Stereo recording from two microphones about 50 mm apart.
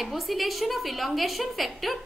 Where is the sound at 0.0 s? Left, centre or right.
Centre.